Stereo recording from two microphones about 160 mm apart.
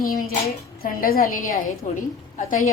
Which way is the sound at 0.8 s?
65° left (ahead or behind).